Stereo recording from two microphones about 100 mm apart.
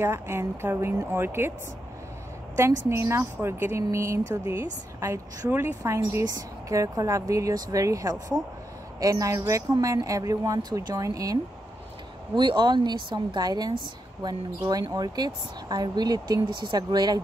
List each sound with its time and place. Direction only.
0.0 s speech: 25° right (ahead or behind)
2.5 s speech: 25° right (ahead or behind)
12.4 s speech: 50° right (ahead or behind)